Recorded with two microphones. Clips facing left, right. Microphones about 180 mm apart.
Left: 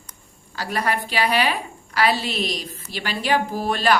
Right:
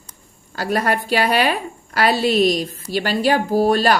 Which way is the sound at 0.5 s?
45° right (ahead or behind).